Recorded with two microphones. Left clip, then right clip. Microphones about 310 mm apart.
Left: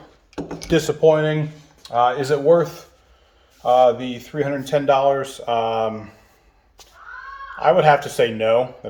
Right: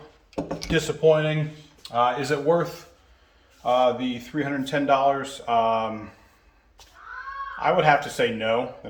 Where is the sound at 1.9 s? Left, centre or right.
Left.